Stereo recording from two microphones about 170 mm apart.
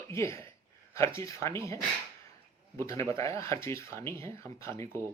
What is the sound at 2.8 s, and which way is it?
Speech, 15° left (ahead or behind).